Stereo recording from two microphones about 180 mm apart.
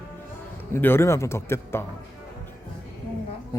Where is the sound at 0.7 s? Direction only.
10° left (ahead or behind).